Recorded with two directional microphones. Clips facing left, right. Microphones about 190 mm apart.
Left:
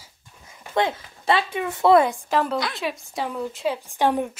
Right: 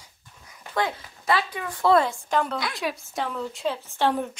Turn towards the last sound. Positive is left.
turn(degrees=15)  # may be behind; listen again after turning